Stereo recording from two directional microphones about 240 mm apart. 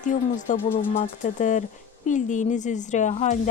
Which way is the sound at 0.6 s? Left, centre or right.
Centre.